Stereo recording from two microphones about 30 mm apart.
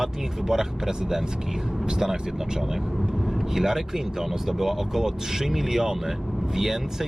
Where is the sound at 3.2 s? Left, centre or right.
Centre.